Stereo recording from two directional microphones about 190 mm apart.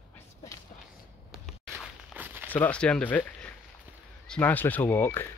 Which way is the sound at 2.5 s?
10° left (ahead or behind).